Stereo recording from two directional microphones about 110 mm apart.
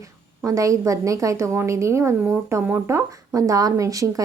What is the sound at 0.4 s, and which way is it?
Speech, 30° right (ahead or behind).